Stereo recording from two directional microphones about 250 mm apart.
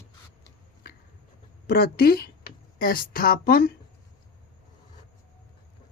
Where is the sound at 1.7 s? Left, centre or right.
Left.